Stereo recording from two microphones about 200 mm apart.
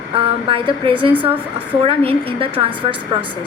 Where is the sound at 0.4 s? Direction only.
25° right (ahead or behind).